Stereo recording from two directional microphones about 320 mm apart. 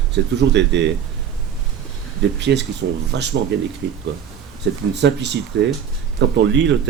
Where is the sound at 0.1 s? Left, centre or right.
Right.